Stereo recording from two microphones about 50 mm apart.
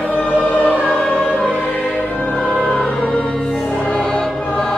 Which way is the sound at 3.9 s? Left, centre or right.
Centre.